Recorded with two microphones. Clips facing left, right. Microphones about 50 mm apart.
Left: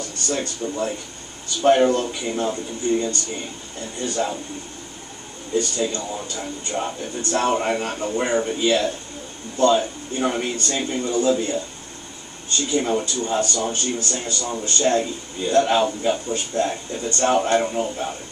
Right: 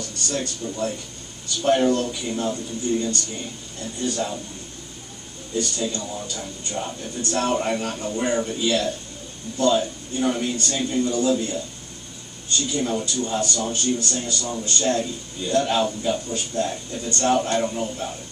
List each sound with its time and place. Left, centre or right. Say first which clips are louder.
0.0 s speech: left 2 dB; left
5.6 s speech: left 2 dB; left